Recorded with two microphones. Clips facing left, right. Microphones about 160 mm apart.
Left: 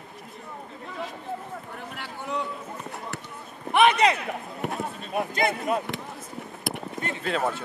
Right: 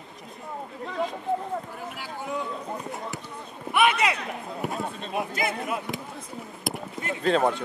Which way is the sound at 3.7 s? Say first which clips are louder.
Left 3 dB; 35° left (ahead or behind).